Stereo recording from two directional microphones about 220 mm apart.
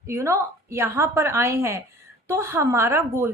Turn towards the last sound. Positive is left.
turn(degrees=-10)  # may be behind; listen again after turning